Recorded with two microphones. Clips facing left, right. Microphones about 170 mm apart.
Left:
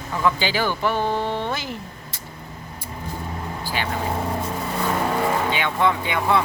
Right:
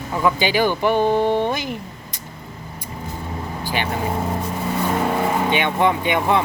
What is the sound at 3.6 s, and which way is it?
Vehicle, 20° right (ahead or behind).